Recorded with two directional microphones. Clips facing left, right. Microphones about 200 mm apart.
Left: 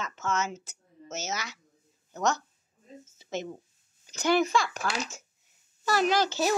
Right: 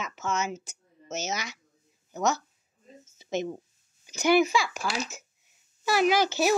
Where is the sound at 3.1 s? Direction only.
15° right (ahead or behind).